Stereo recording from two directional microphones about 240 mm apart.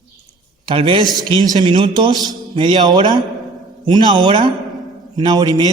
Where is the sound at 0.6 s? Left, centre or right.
Right.